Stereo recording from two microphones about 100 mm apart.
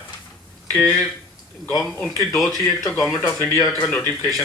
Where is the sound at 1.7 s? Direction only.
Centre (ahead or behind).